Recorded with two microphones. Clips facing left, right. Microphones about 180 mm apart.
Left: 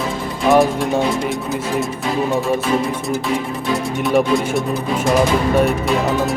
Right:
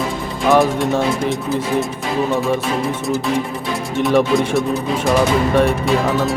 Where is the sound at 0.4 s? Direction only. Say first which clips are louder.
Even; centre (ahead or behind).